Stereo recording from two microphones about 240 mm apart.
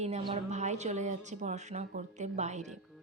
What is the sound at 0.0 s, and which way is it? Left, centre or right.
A woman's voice, right.